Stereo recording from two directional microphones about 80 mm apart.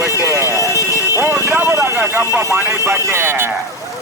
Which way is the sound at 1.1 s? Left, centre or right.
Right.